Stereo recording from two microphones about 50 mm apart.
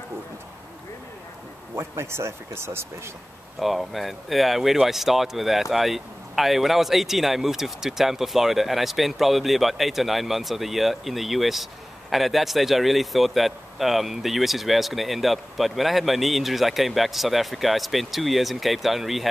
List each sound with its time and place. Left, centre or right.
1.8 s speech: right
3.5 s speech: centre